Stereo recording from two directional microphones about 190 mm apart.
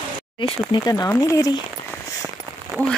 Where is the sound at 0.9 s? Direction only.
15° left (ahead or behind).